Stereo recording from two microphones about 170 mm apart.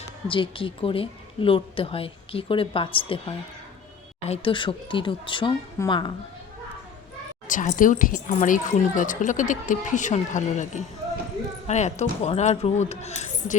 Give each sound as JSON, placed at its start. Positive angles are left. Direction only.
{"t": 0.3, "sound": "speech", "side_deg": 30}
{"t": 5.8, "sound": "a woman's voice", "side_deg": 15}
{"t": 7.4, "sound": "a woman's voice", "side_deg": 50}